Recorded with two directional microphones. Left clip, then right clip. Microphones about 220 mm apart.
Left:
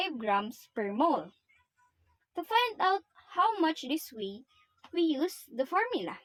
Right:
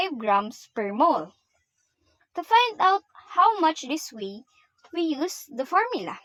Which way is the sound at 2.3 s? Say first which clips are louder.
Right 8 dB; 20° right (ahead or behind).